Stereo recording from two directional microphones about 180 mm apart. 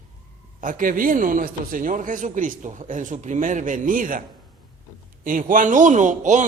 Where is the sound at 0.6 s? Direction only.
50° right (ahead or behind).